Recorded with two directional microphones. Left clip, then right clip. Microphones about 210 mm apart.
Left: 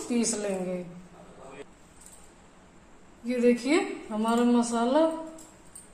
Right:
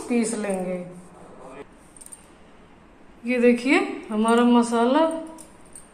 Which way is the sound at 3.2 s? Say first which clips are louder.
Right 5 dB; 10° left (ahead or behind).